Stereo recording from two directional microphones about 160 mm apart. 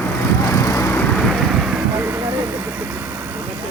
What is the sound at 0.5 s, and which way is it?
Vehicle, 20° left (ahead or behind).